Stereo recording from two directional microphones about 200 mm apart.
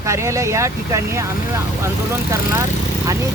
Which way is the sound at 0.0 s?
15° right (ahead or behind).